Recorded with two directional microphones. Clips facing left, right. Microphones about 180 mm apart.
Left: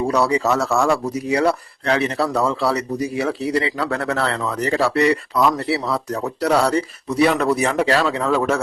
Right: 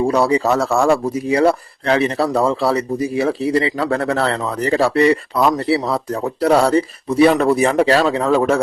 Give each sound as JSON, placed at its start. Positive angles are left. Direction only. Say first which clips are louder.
{"t": 0.1, "sound": "speech", "louder": "right 3 dB", "side_deg": -30}